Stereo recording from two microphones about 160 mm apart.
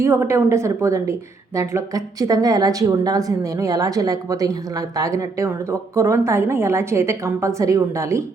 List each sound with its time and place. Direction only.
0.0 s a woman's voice: 15° right (ahead or behind)